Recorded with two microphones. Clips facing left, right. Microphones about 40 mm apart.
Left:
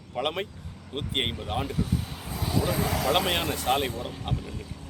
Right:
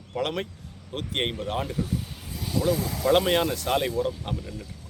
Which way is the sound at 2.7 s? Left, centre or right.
Left.